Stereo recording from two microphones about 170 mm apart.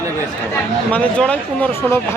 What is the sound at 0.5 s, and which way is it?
Speech, 5° left (ahead or behind).